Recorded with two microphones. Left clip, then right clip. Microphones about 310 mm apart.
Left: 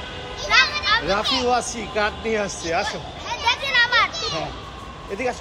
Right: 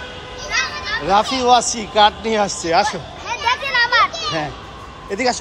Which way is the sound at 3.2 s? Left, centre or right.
Right.